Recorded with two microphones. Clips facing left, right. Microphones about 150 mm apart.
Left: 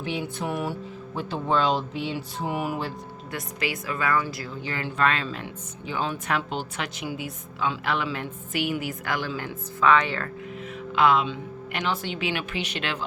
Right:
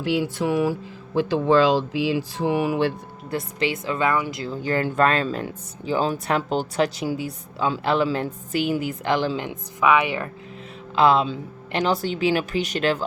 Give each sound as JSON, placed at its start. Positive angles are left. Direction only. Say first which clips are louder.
{"t": 0.2, "sound": "music", "louder": "right 7 dB", "side_deg": -90}
{"t": 3.3, "sound": "a woman's voice", "louder": "right 6 dB", "side_deg": -25}
{"t": 4.6, "sound": "speech", "louder": "right 5 dB", "side_deg": -45}
{"t": 10.9, "sound": "speech", "louder": "right 3 dB", "side_deg": -30}